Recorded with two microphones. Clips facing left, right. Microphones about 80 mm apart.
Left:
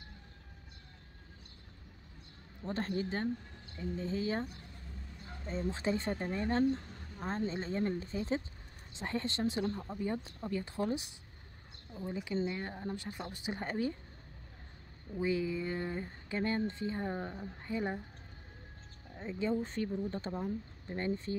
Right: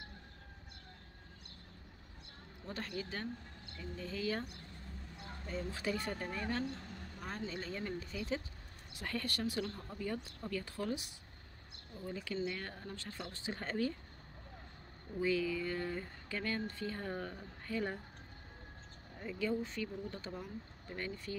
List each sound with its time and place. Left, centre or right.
2.6 s speech: left
5.5 s speech: left
15.1 s speech: left
19.1 s speech: left